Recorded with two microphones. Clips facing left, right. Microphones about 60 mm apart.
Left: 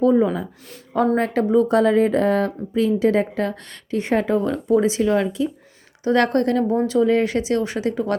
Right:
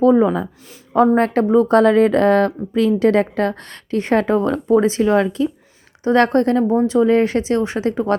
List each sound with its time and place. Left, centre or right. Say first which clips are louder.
0.0 s speech: right 4 dB; right
6.1 s a woman's voice: right 3 dB; right
7.1 s a woman's voice: right 3 dB; right